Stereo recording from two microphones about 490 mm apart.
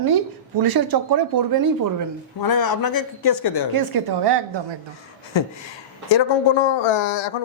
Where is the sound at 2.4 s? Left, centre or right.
Left.